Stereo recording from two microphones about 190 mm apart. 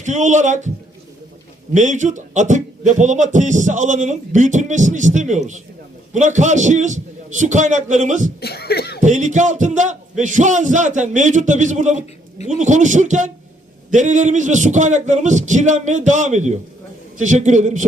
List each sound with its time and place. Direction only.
0.0 s speech: 40° right (ahead or behind)
1.7 s speech: 40° right (ahead or behind)
8.4 s speech: 55° left (ahead or behind)
9.0 s speech: 40° right (ahead or behind)